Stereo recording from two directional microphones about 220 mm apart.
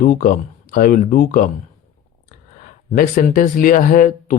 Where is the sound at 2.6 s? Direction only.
40° left (ahead or behind).